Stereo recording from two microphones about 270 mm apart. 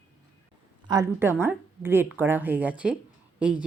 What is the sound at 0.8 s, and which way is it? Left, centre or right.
Speech, centre.